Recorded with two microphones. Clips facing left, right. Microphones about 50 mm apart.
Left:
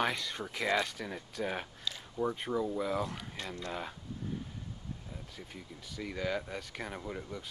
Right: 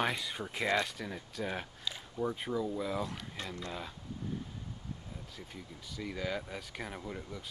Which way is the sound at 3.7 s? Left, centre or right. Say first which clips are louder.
Left 3 dB; centre.